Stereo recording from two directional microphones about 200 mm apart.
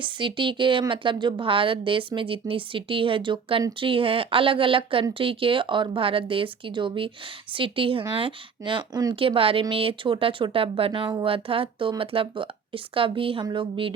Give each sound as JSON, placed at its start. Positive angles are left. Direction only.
{"t": 0.0, "sound": "a woman's voice", "side_deg": -25}